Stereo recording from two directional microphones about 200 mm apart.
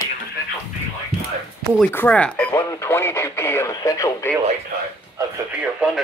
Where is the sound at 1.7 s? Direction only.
10° left (ahead or behind).